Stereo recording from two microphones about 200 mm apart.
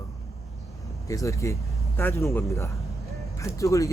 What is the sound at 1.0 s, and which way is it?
Speech, 15° left (ahead or behind).